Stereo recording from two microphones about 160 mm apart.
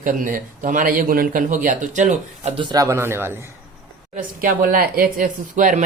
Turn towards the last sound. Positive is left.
turn(degrees=-55)  # may be behind; listen again after turning